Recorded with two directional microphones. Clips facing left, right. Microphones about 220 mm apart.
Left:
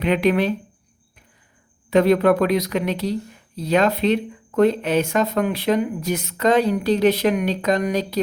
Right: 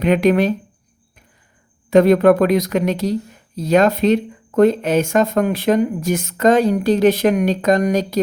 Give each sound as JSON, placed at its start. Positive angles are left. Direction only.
{"t": 0.0, "sound": "speech", "side_deg": -45}
{"t": 1.9, "sound": "speech", "side_deg": -45}